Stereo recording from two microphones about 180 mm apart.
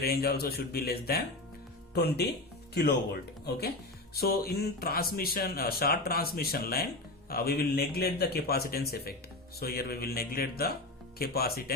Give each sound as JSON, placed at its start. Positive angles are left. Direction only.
{"t": 0.0, "sound": "speech", "side_deg": 60}